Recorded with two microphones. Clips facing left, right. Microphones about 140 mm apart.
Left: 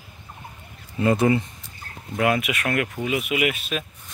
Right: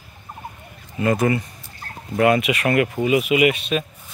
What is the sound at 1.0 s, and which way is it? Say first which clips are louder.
Speech: even; 25° left (ahead or behind).